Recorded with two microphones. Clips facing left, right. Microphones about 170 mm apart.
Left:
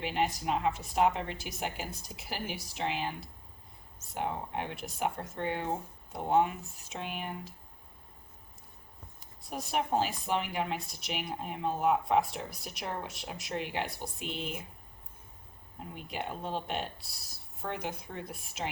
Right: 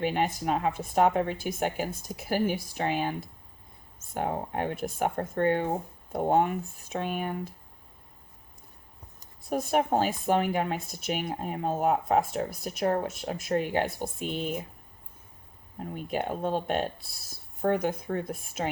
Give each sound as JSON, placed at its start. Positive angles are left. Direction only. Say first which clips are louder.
{"t": 0.0, "sound": "speech", "louder": "right 4 dB", "side_deg": -50}
{"t": 9.2, "sound": "speech", "louder": "right 10 dB", "side_deg": -50}
{"t": 16.0, "sound": "speech", "louder": "right 8 dB", "side_deg": -50}